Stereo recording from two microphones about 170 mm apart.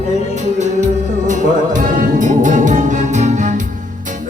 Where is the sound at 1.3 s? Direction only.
50° right (ahead or behind).